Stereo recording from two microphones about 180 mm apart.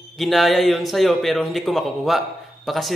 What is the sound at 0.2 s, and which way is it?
Speech, centre (ahead or behind).